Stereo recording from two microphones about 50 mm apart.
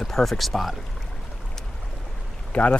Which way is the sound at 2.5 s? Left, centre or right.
Centre.